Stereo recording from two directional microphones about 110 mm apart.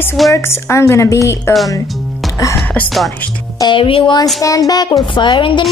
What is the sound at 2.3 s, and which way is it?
Music, 30° left (ahead or behind).